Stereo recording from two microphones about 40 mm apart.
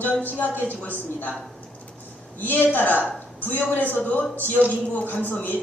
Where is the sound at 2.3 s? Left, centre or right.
Left.